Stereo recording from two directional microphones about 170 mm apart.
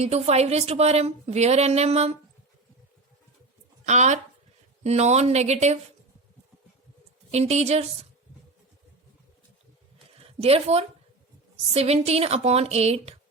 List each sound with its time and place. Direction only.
0.0 s speech: 40° right (ahead or behind)
3.8 s speech: 45° right (ahead or behind)
7.3 s speech: 40° right (ahead or behind)
10.2 s a woman's voice: 35° right (ahead or behind)